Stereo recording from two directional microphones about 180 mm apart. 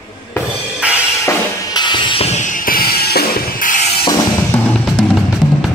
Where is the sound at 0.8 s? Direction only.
5° right (ahead or behind).